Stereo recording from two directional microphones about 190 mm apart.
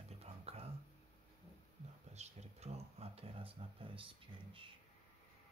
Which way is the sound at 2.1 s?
35° right (ahead or behind).